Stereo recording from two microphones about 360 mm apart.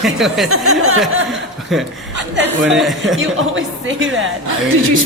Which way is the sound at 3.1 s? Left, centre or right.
Right.